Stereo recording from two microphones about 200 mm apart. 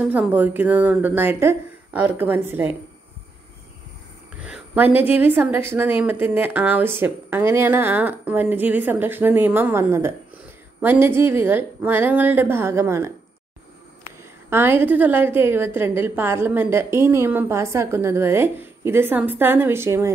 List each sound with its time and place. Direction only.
0.0 s a woman's voice: 5° right (ahead or behind)
4.5 s a woman's voice: 10° right (ahead or behind)
14.5 s a woman's voice: 10° right (ahead or behind)